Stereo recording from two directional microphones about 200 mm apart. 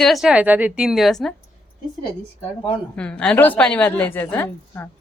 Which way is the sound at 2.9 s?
5° left (ahead or behind).